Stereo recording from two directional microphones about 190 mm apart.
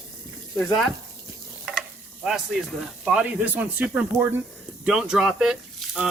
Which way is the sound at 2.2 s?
Centre (ahead or behind).